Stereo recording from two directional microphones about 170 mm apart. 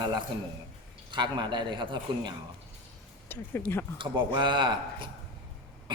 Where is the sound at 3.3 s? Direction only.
10° left (ahead or behind).